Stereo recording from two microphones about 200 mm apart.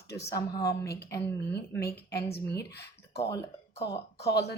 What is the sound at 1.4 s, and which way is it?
Speech, 55° left (ahead or behind).